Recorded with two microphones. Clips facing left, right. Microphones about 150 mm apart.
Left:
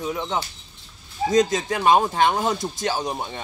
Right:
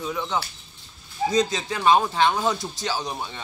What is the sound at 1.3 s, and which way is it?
Speech, 45° left (ahead or behind).